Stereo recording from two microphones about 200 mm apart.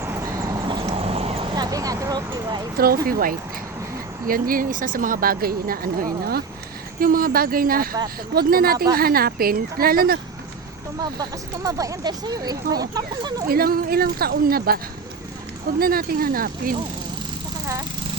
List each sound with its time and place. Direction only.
0.0 s vehicle: 15° right (ahead or behind)
2.7 s speech: 50° right (ahead or behind)
11.0 s speech: 20° right (ahead or behind)
13.5 s speech: 50° right (ahead or behind)
15.8 s speech: 45° right (ahead or behind)